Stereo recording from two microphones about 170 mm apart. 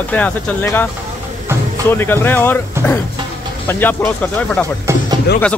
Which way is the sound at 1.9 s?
15° left (ahead or behind).